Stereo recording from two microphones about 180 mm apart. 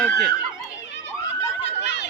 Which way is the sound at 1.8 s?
75° left (ahead or behind).